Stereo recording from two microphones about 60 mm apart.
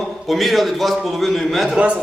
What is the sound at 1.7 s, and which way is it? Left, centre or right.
Speech, right.